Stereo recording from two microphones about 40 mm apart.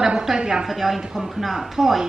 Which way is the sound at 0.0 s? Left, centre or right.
Centre.